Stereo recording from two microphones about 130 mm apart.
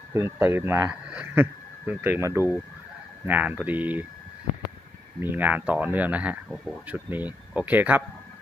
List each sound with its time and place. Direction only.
0.1 s speech: 20° right (ahead or behind)
5.2 s speech: 15° right (ahead or behind)